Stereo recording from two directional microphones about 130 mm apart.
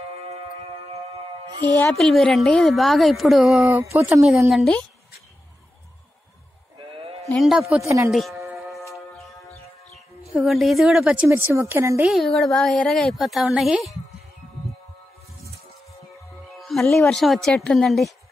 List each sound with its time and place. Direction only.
1.9 s a woman's voice: 5° left (ahead or behind)
3.6 s speech: 20° right (ahead or behind)
4.2 s a woman's voice: centre (ahead or behind)
6.8 s sheep: 45° right (ahead or behind)
7.3 s a woman's voice: centre (ahead or behind)
7.8 s speech: 25° right (ahead or behind)
8.1 s music: centre (ahead or behind)
10.3 s a woman's voice: centre (ahead or behind)
11.2 s speech: 20° right (ahead or behind)
12.0 s a woman's voice: centre (ahead or behind)
16.5 s a woman's voice: centre (ahead or behind)